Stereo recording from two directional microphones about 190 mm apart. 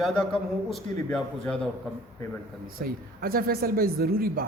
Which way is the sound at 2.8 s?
50° right (ahead or behind).